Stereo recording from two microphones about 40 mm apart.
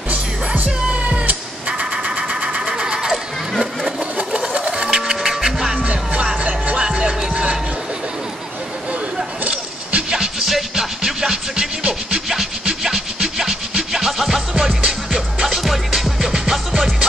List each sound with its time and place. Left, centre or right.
1.0 s music: right
1.7 s sewing machine: right
4.2 s sewing machine: right
4.8 s music: centre
5.9 s music: right
6.8 s music: right
9.4 s a sound: right
10.1 s music: centre
12.8 s music: centre
15.6 s music: centre